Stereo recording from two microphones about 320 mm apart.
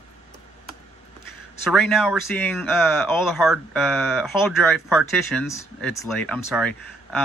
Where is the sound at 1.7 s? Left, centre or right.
Centre.